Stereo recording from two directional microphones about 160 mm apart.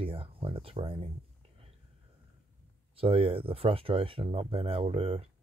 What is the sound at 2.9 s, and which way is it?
Speech, 35° right (ahead or behind).